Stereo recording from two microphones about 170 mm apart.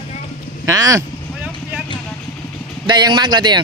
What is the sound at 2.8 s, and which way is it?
Speech, 25° right (ahead or behind).